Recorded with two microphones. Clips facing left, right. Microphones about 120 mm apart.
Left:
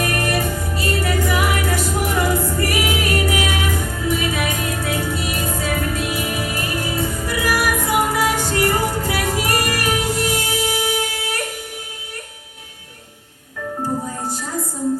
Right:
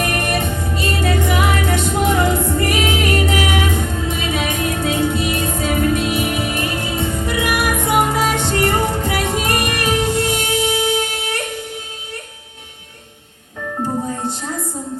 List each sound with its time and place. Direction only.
0.0 s music: 20° right (ahead or behind)